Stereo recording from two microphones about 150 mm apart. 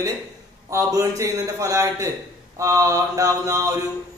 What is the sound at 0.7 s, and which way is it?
A man's voice, 20° right (ahead or behind).